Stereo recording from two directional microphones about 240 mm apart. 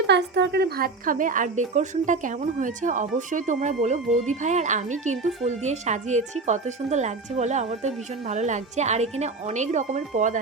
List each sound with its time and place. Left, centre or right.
0.1 s speech: right